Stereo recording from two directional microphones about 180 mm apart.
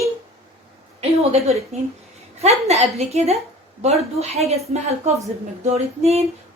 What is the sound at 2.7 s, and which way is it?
A woman's voice, 35° right (ahead or behind).